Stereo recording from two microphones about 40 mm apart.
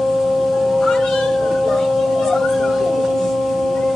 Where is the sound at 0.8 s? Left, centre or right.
Centre.